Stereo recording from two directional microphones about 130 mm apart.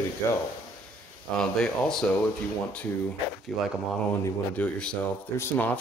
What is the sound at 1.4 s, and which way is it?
Speech, 5° left (ahead or behind).